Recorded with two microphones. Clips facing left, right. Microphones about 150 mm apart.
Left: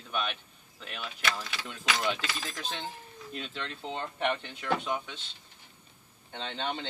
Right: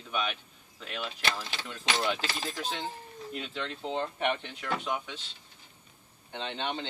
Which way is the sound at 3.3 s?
5° right (ahead or behind).